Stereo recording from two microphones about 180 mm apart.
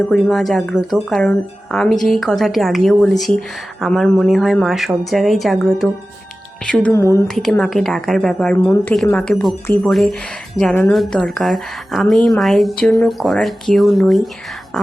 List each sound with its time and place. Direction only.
0.1 s a woman's voice: centre (ahead or behind)
6.9 s speech: 15° left (ahead or behind)
7.3 s a woman's voice: centre (ahead or behind)
8.5 s a woman's voice: 15° left (ahead or behind)